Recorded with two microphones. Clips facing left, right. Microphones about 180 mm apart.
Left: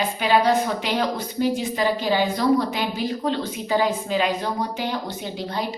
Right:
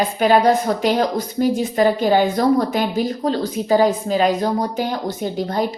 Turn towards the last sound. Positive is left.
turn(degrees=-45)  # may be behind; listen again after turning